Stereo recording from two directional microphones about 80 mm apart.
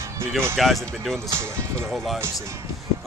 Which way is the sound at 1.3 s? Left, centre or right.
Right.